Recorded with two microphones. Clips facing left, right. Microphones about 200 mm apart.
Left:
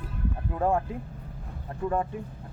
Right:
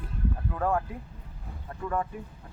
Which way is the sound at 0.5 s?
25° left (ahead or behind).